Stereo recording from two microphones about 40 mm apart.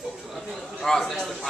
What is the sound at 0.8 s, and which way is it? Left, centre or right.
Speech, centre.